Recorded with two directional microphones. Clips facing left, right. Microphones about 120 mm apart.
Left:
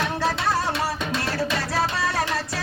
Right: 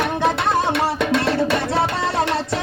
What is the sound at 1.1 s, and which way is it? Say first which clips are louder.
Music: right 7 dB; 65° right (ahead or behind).